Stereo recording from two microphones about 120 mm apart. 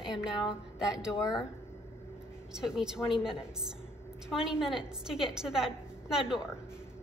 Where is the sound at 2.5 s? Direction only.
5° right (ahead or behind).